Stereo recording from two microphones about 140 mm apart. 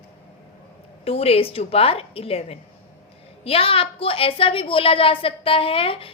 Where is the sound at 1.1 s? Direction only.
45° left (ahead or behind).